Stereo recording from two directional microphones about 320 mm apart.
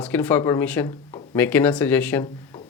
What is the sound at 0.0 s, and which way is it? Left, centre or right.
Speech, centre.